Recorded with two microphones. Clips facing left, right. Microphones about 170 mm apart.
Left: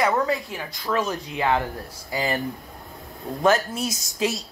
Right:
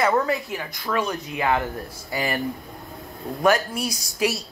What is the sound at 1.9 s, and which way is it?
Speech, 20° left (ahead or behind).